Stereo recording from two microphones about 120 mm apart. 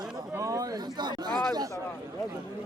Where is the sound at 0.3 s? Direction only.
30° right (ahead or behind).